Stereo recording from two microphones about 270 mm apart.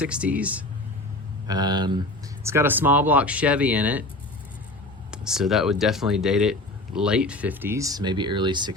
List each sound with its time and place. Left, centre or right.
0.0 s speech: centre
5.1 s speech: centre